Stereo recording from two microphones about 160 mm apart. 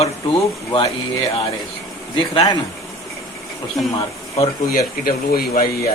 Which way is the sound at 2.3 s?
30° left (ahead or behind).